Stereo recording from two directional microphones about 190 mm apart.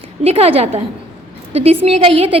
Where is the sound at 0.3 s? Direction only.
30° right (ahead or behind).